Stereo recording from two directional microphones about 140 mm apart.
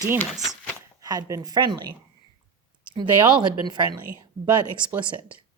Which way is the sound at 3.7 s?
35° right (ahead or behind).